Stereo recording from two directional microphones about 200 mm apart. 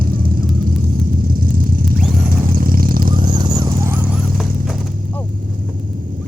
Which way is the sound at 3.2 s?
20° right (ahead or behind).